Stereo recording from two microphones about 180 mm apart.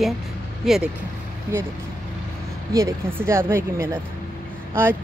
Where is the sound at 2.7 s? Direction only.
15° right (ahead or behind).